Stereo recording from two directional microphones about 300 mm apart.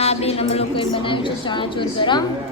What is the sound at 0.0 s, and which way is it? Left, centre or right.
A woman's voice, centre.